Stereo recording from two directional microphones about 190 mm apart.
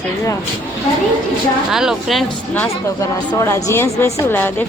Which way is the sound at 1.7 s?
Centre (ahead or behind).